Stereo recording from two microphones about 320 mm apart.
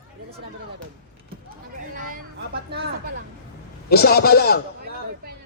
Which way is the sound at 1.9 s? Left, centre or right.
Right.